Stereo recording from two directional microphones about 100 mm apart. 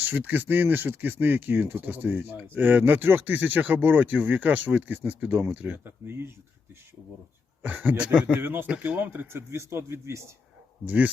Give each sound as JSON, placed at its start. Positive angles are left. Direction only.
{"t": 0.0, "sound": "speech", "side_deg": -20}
{"t": 7.6, "sound": "speech", "side_deg": -15}
{"t": 10.8, "sound": "speech", "side_deg": -15}